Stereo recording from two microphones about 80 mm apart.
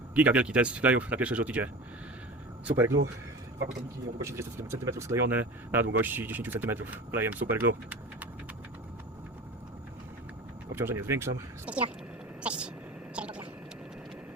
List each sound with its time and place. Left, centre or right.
0.1 s speech: centre
2.6 s speech: right
4.2 s speech: right
5.7 s speech: right
10.7 s speech: right
11.7 s speech: centre
12.4 s vehicle: centre
13.1 s a sound: centre